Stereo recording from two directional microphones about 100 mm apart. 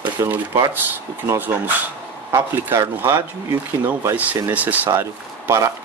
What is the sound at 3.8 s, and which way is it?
Speech, 20° right (ahead or behind).